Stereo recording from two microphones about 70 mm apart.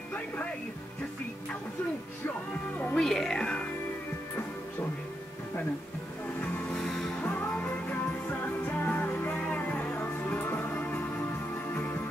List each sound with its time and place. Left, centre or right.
3.0 s speech: centre
6.4 s music: centre
7.5 s music: left